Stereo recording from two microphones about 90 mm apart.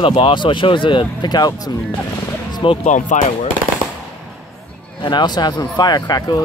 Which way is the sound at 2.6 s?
70° left (ahead or behind).